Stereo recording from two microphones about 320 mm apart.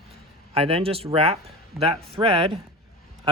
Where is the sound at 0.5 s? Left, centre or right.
Centre.